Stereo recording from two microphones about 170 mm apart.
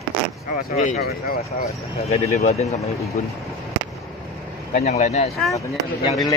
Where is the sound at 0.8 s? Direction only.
60° left (ahead or behind).